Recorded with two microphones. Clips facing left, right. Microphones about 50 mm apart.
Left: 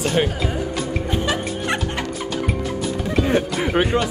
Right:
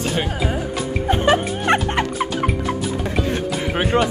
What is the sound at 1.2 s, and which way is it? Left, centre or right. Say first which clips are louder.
Music: right 5 dB; right.